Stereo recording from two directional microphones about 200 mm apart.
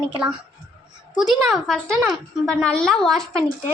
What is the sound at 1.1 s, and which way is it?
Speech, centre (ahead or behind).